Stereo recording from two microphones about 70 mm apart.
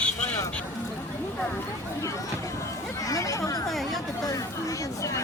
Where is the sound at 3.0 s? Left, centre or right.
Left.